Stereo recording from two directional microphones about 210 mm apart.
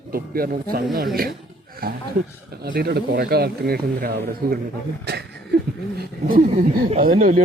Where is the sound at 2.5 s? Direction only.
45° right (ahead or behind).